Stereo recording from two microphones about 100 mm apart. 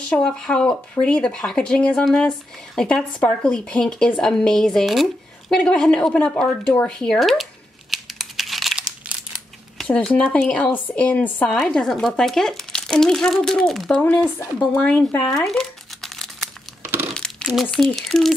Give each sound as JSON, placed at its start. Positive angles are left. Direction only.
{"t": 0.1, "sound": "speech", "side_deg": 10}
{"t": 7.9, "sound": "crumpling", "side_deg": 0}
{"t": 9.8, "sound": "speech", "side_deg": 10}
{"t": 15.3, "sound": "crumpling", "side_deg": 5}
{"t": 17.1, "sound": "speech", "side_deg": 10}